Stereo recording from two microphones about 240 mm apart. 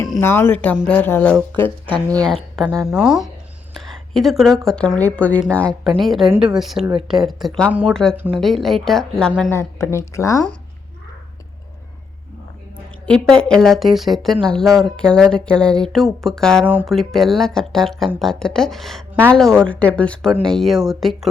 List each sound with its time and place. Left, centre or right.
0.1 s speech: centre
1.9 s speech: centre
2.2 s speech: centre
9.5 s speech: centre
13.1 s speech: centre